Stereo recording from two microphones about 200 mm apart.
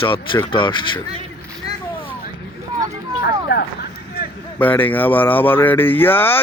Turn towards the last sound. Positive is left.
turn(degrees=10)  # may be behind; listen again after turning